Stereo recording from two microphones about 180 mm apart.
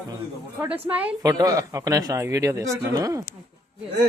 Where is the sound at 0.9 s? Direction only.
10° right (ahead or behind).